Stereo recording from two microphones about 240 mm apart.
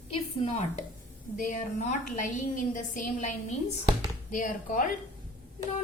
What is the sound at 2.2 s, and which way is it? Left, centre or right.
A woman's voice, left.